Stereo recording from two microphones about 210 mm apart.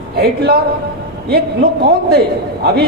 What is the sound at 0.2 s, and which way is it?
Speech, 50° right (ahead or behind).